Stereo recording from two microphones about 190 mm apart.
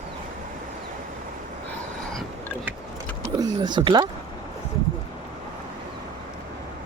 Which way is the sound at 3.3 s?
20° right (ahead or behind).